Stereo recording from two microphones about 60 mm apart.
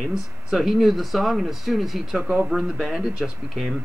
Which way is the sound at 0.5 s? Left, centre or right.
Centre.